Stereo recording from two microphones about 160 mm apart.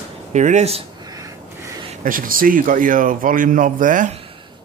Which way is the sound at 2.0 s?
60° right (ahead or behind).